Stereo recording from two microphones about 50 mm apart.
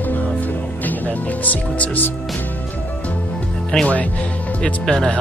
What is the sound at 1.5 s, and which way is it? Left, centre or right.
Speech, left.